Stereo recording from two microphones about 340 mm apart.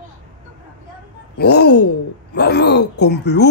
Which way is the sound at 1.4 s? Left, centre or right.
Left.